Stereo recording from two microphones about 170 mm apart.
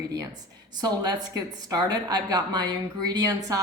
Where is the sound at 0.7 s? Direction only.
25° right (ahead or behind).